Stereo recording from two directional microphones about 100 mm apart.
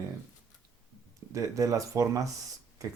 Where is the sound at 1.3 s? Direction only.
30° right (ahead or behind).